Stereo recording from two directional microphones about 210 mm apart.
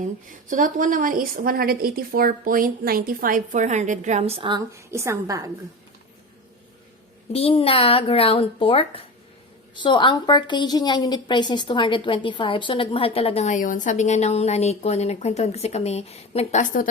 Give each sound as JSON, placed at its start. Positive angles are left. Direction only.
{"t": 0.0, "sound": "a woman's voice", "side_deg": -40}
{"t": 7.3, "sound": "a woman's voice", "side_deg": 30}